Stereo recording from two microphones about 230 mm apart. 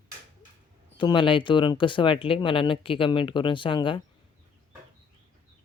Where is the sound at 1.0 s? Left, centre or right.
Left.